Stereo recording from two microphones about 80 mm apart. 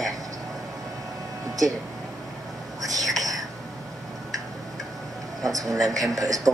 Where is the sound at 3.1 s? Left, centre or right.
Right.